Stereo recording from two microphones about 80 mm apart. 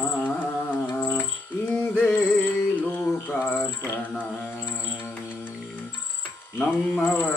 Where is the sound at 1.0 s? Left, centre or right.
Left.